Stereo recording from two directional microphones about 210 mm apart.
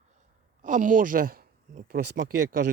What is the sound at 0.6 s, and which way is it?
Speech, 35° right (ahead or behind).